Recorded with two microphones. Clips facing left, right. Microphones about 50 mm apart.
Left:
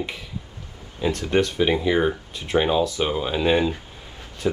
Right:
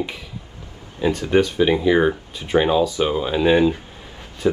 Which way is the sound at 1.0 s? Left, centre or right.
Centre.